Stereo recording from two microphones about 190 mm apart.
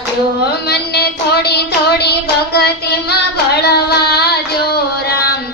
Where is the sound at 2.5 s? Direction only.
60° left (ahead or behind).